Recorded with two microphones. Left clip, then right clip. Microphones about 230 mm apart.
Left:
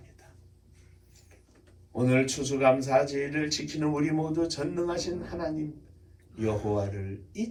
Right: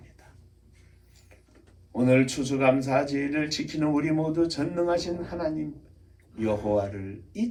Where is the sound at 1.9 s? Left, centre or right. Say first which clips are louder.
Right 4 dB; right.